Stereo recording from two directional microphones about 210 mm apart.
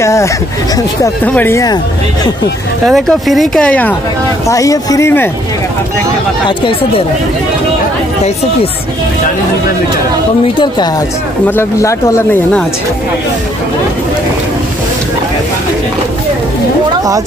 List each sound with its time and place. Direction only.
0.0 s speech: 15° left (ahead or behind)
2.9 s speech: centre (ahead or behind)
4.5 s speech: 15° left (ahead or behind)
10.6 s a woman's voice: 20° left (ahead or behind)